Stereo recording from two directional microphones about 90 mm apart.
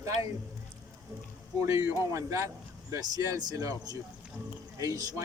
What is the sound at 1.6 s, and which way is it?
Speech, 30° right (ahead or behind).